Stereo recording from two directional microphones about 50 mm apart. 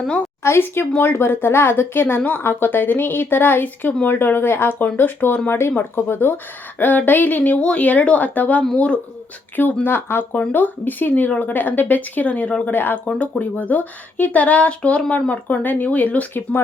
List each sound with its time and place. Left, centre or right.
0.4 s speech: left
7.5 s speech: left
9.8 s speech: left
12.7 s speech: left